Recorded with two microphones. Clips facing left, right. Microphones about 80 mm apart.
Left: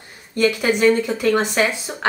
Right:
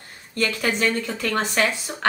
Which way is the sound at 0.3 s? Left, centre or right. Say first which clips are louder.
Left 6 dB; centre.